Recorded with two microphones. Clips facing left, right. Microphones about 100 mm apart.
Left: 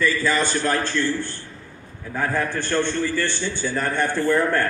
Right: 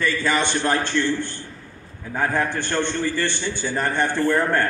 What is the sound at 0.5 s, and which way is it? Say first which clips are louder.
A man's voice: right 1 dB; 20° right (ahead or behind).